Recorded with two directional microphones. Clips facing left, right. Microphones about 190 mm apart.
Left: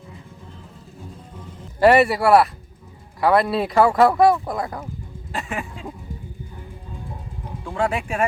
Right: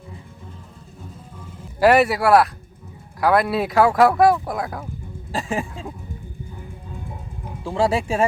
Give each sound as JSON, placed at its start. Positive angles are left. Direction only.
{"t": 1.8, "sound": "speech", "side_deg": 0}
{"t": 5.3, "sound": "speech", "side_deg": -30}
{"t": 7.6, "sound": "speech", "side_deg": -25}